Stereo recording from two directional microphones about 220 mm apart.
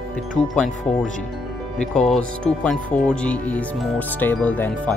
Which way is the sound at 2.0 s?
5° left (ahead or behind).